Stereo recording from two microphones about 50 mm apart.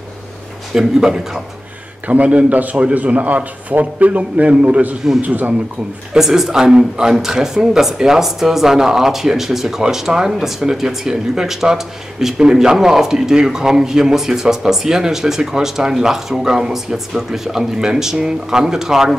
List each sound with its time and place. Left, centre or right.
0.7 s speech: centre
2.0 s a man's voice: right
6.1 s speech: centre